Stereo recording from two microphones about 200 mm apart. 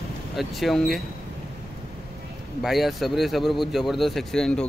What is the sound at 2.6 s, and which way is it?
Speech, centre (ahead or behind).